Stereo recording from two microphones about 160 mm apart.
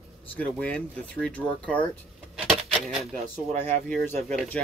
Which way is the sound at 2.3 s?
Centre (ahead or behind).